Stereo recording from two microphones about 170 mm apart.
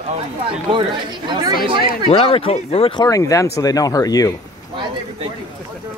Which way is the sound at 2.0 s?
35° left (ahead or behind).